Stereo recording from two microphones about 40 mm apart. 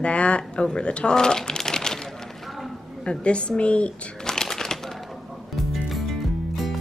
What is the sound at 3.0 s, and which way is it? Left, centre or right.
Speech, left.